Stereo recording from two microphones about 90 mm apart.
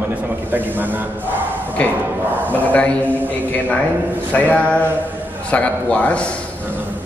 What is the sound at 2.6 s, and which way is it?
A man's voice, 15° left (ahead or behind).